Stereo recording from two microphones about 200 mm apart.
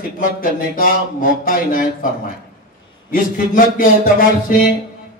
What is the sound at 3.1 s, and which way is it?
Speech, 45° left (ahead or behind).